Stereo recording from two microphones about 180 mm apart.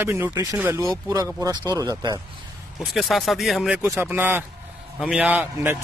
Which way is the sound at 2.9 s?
Centre (ahead or behind).